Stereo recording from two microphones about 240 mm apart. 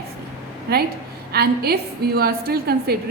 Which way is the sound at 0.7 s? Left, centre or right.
Right.